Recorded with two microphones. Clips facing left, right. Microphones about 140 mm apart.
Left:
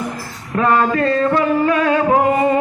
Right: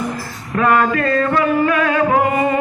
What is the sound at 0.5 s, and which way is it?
Music, 30° left (ahead or behind).